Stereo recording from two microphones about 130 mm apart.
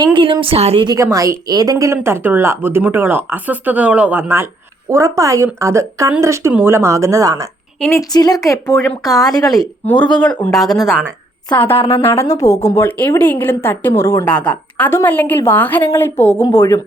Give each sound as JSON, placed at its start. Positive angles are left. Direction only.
{"t": 0.0, "sound": "a woman's voice", "side_deg": -40}
{"t": 1.1, "sound": "a woman's voice", "side_deg": -25}
{"t": 7.9, "sound": "speech", "side_deg": 30}
{"t": 8.6, "sound": "speech", "side_deg": 5}
{"t": 9.0, "sound": "speech", "side_deg": 30}
{"t": 9.8, "sound": "a woman's voice", "side_deg": 10}
{"t": 10.8, "sound": "speech", "side_deg": -10}
{"t": 11.4, "sound": "a woman's voice", "side_deg": 40}
{"t": 12.0, "sound": "a woman's voice", "side_deg": 20}
{"t": 14.3, "sound": "a woman's voice", "side_deg": 10}